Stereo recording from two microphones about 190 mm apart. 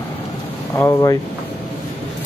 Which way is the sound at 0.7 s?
15° left (ahead or behind).